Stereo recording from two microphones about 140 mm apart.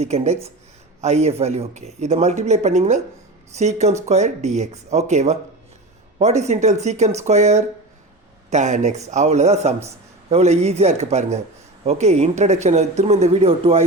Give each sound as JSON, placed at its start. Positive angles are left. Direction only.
{"t": 0.0, "sound": "a man's voice", "side_deg": -50}